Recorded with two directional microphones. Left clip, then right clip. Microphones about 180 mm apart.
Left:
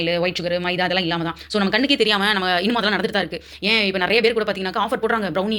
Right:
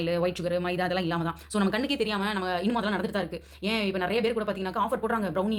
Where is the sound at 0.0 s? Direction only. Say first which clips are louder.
Left 7 dB; centre (ahead or behind).